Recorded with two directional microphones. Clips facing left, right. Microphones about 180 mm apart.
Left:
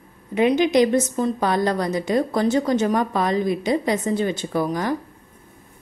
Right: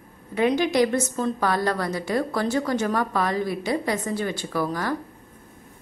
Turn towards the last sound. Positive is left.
turn(degrees=20)  # may be behind; listen again after turning